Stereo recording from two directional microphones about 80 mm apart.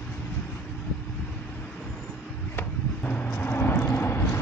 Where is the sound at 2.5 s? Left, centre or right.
Centre.